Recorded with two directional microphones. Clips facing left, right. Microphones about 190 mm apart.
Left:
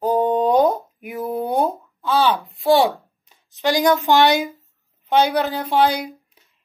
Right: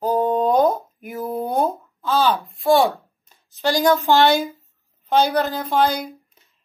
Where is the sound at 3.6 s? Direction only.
20° left (ahead or behind).